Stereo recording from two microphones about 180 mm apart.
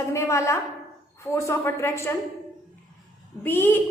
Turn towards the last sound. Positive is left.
turn(degrees=10)  # may be behind; listen again after turning